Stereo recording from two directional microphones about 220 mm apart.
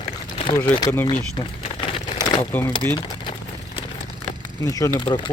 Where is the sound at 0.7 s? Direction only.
15° left (ahead or behind).